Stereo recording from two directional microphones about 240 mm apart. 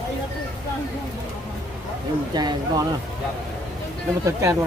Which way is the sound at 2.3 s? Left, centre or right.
Centre.